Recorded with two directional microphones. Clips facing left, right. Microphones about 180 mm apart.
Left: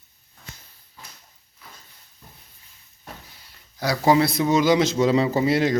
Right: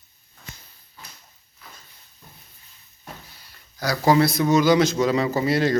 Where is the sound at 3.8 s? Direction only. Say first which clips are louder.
Even; 25° left (ahead or behind).